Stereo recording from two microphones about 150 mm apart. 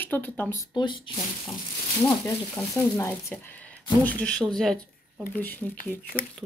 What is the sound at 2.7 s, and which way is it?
Speech, 20° left (ahead or behind).